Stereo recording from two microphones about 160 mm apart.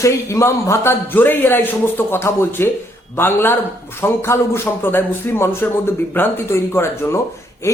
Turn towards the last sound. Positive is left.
turn(degrees=20)  # may be behind; listen again after turning